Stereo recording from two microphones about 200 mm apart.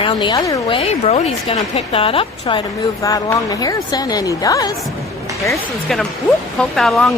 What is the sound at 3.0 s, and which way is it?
A woman's voice, 15° left (ahead or behind).